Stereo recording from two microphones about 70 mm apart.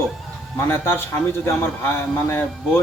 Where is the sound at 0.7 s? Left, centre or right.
Left.